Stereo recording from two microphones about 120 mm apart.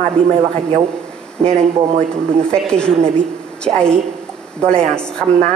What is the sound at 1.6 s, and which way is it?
Speech, 65° right (ahead or behind).